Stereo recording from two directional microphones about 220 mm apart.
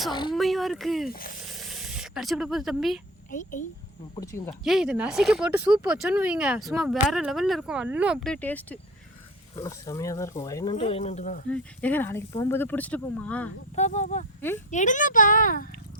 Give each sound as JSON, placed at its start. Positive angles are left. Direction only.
{"t": 0.1, "sound": "speech", "side_deg": 20}
{"t": 0.3, "sound": "speech", "side_deg": 0}
{"t": 1.1, "sound": "speech", "side_deg": 40}
{"t": 1.5, "sound": "spray", "side_deg": 0}
{"t": 3.2, "sound": "speech", "side_deg": 35}
{"t": 4.1, "sound": "speech", "side_deg": 15}
{"t": 4.6, "sound": "speech", "side_deg": 0}
{"t": 11.4, "sound": "speech", "side_deg": 5}
{"t": 13.7, "sound": "speech", "side_deg": 30}